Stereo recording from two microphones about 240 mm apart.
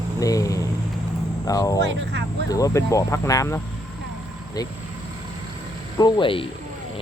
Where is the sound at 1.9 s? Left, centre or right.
Right.